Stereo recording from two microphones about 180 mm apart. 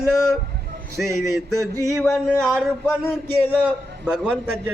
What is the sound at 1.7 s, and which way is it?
Speech, 15° right (ahead or behind).